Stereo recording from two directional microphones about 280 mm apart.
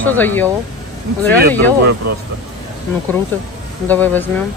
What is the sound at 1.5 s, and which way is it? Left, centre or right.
Speech, centre.